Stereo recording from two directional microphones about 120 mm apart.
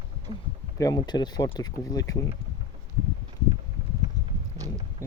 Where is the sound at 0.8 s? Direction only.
35° left (ahead or behind).